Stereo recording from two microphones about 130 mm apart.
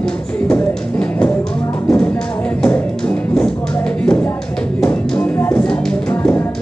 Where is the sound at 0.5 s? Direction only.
5° left (ahead or behind).